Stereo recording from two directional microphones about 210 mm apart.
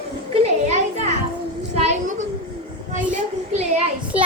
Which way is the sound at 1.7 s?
30° right (ahead or behind).